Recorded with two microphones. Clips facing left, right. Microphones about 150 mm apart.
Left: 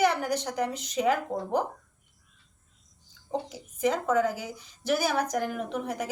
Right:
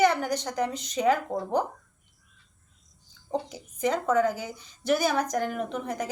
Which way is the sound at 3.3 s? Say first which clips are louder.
Right 1 dB; centre (ahead or behind).